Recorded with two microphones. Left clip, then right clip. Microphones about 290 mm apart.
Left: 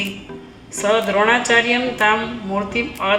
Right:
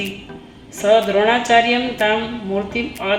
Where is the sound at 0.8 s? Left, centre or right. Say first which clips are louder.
Right 2 dB; left.